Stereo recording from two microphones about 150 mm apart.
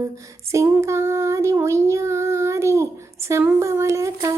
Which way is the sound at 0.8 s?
20° right (ahead or behind).